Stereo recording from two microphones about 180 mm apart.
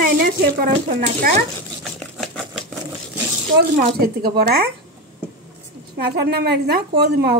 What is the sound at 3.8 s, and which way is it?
Speech, 60° right (ahead or behind).